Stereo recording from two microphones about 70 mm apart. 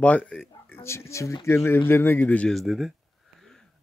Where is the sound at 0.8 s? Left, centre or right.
Left.